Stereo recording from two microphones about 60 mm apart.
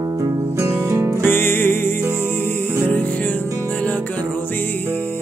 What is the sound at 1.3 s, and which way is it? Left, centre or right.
Music, left.